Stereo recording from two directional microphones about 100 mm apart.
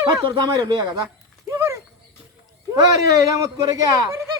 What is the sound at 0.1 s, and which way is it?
Speech, 50° right (ahead or behind).